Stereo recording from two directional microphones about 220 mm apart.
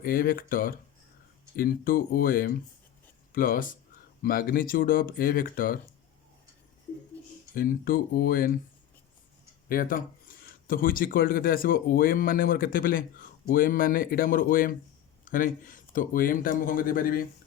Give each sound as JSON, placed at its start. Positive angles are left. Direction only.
{"t": 0.0, "sound": "speech", "side_deg": 40}
{"t": 7.5, "sound": "speech", "side_deg": 40}
{"t": 9.6, "sound": "speech", "side_deg": 40}